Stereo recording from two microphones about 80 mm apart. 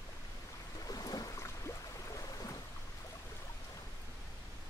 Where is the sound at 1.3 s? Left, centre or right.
Left.